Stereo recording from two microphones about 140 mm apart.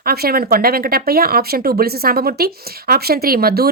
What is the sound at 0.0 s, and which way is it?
A woman's voice, 90° right.